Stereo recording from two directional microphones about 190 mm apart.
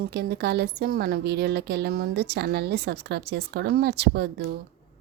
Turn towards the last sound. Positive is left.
turn(degrees=-60)  # may be behind; listen again after turning